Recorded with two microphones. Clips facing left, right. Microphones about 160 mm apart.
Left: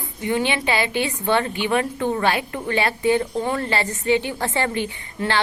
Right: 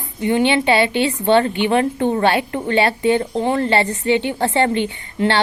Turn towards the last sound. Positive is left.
turn(degrees=-25)  # may be behind; listen again after turning